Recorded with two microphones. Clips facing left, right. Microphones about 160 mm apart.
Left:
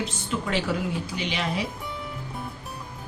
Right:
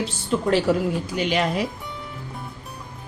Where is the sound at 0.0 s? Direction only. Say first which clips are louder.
Right 6 dB; 40° right (ahead or behind).